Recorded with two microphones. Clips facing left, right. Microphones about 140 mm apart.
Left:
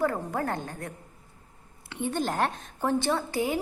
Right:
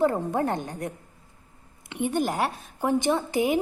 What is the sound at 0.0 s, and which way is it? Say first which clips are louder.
A woman's voice: right 4 dB; 25° right (ahead or behind).